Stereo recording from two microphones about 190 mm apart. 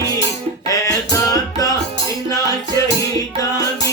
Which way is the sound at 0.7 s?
20° left (ahead or behind).